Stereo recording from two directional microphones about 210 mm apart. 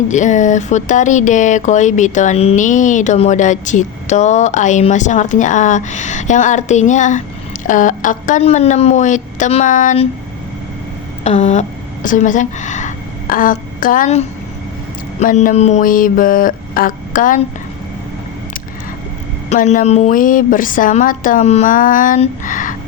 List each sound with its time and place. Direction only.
0.1 s speech: 35° left (ahead or behind)
11.2 s a woman's voice: 30° left (ahead or behind)
19.5 s speech: 35° left (ahead or behind)